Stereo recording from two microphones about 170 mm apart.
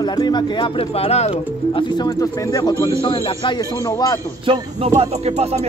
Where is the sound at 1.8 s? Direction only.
20° left (ahead or behind).